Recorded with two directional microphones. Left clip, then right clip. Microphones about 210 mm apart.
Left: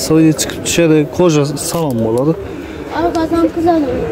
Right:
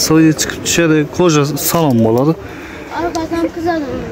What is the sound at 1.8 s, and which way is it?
Speech, 20° right (ahead or behind).